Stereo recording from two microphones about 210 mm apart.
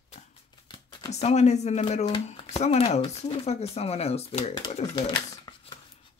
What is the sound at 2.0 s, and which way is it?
Speech, 25° left (ahead or behind).